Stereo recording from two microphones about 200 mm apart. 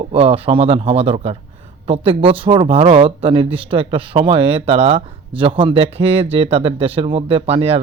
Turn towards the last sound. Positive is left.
turn(degrees=-30)  # may be behind; listen again after turning